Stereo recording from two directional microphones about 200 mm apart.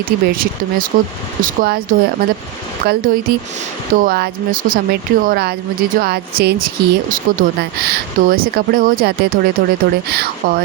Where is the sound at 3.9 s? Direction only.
45° right (ahead or behind).